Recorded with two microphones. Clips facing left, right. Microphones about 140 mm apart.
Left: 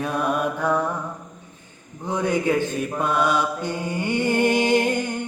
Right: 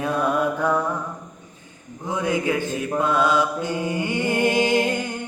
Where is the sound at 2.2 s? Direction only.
10° right (ahead or behind).